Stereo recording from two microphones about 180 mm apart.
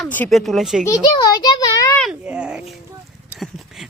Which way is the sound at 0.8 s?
20° left (ahead or behind).